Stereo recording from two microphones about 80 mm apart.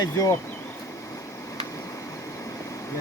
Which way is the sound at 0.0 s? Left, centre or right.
Left.